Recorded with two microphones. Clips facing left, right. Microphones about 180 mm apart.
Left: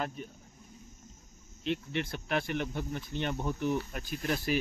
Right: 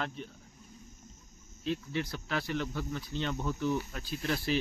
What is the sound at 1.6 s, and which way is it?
Speech, 65° left (ahead or behind).